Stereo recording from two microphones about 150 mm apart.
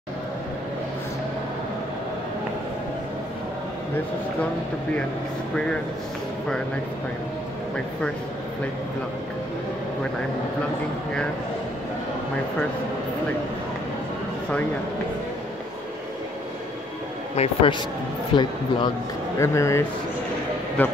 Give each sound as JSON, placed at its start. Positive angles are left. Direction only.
{"t": 17.4, "sound": "speech", "side_deg": 40}
{"t": 19.3, "sound": "a man's voice", "side_deg": 20}